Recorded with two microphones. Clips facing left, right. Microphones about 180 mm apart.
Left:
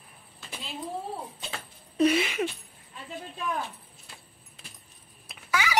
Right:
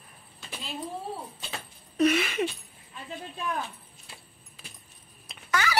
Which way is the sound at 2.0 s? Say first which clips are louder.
Left 1 dB; 30° left (ahead or behind).